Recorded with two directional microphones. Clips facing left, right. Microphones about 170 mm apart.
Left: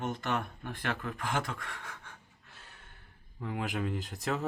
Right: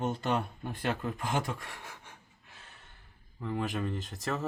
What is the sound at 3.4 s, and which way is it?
Speech, 5° left (ahead or behind).